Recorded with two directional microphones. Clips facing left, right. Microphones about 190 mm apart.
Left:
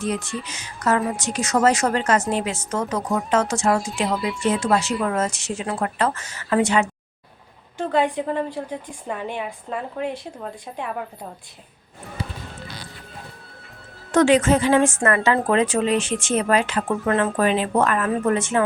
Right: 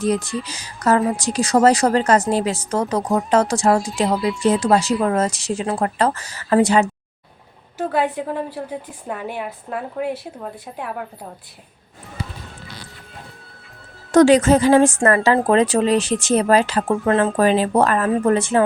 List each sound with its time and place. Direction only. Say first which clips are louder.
0.0 s speech: right 5 dB; 35° right (ahead or behind)
7.8 s a woman's voice: even; 5° right (ahead or behind)
14.1 s speech: right 4 dB; 40° right (ahead or behind)